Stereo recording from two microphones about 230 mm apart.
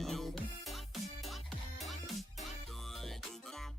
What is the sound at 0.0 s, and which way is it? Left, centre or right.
Music, centre.